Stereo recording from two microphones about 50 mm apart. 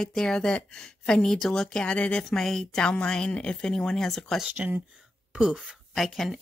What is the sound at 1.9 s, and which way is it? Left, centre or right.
Speech, left.